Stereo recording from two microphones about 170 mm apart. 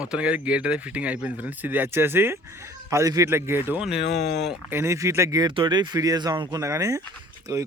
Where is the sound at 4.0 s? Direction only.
75° left (ahead or behind).